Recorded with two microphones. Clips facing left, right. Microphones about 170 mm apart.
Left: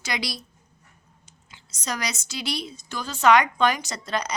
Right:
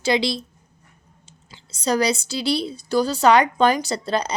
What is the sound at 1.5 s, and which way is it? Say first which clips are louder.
A woman's voice: right 10 dB; 30° right (ahead or behind).